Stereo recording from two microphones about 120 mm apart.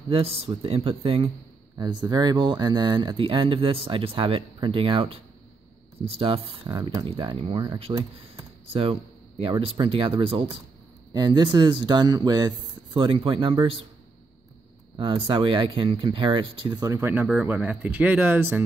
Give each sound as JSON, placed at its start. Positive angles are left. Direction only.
{"t": 0.1, "sound": "speech", "side_deg": -55}
{"t": 1.8, "sound": "speech", "side_deg": -35}
{"t": 6.7, "sound": "speech", "side_deg": -35}
{"t": 7.1, "sound": "speech", "side_deg": -50}
{"t": 9.4, "sound": "speech", "side_deg": -45}
{"t": 11.1, "sound": "speech", "side_deg": -35}
{"t": 15.2, "sound": "speech", "side_deg": -45}
{"t": 16.7, "sound": "speech", "side_deg": -30}
{"t": 17.0, "sound": "speech", "side_deg": -15}